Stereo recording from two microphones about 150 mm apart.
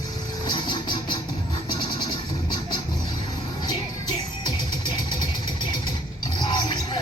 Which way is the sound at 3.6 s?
30° left (ahead or behind).